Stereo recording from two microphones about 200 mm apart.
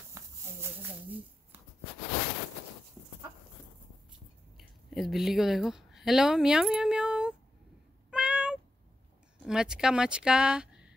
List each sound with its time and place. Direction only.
0.2 s a sound: 15° right (ahead or behind)
4.6 s speech: centre (ahead or behind)
8.1 s cat: 5° right (ahead or behind)
9.4 s speech: 5° right (ahead or behind)